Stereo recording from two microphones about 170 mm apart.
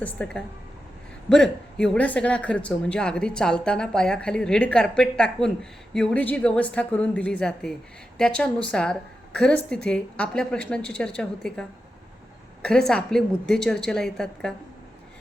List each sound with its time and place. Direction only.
0.0 s a woman's voice: 5° left (ahead or behind)
12.9 s speech: 5° left (ahead or behind)